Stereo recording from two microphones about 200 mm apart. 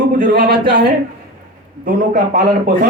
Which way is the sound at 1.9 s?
45° right (ahead or behind).